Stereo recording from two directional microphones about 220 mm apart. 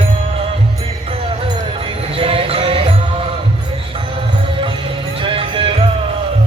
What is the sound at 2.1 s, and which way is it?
Music, 25° right (ahead or behind).